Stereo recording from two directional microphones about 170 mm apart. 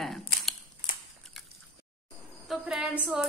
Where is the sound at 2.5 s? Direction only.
5° right (ahead or behind).